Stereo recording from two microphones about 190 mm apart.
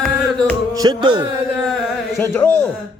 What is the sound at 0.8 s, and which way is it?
Music, 20° right (ahead or behind).